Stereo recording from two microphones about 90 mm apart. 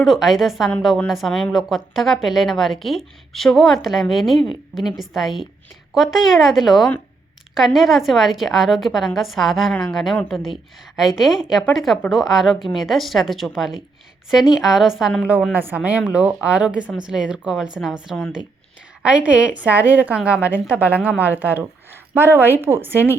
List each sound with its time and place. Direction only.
0.0 s a woman's voice: centre (ahead or behind)
15.5 s a woman's voice: 15° right (ahead or behind)